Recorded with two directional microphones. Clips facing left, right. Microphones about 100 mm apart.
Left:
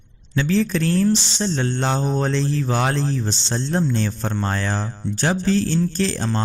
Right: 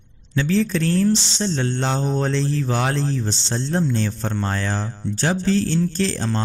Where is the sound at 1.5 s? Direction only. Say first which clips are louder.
Left 1 dB; 45° left (ahead or behind).